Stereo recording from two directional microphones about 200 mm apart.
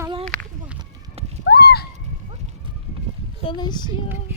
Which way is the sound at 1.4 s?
50° left (ahead or behind).